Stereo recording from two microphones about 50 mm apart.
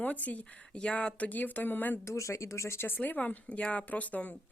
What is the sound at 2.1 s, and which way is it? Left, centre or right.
Speech, left.